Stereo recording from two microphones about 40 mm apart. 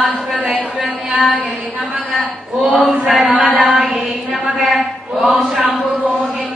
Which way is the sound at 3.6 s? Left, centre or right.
Right.